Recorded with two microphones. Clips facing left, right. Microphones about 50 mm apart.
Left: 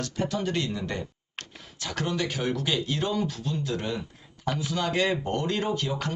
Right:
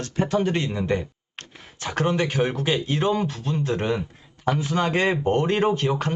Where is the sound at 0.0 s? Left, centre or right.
Right.